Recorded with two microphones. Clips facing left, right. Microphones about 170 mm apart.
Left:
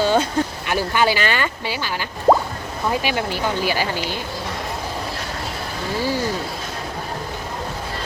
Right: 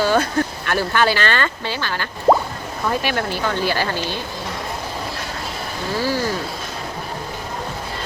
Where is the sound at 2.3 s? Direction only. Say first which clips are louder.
Even; centre (ahead or behind).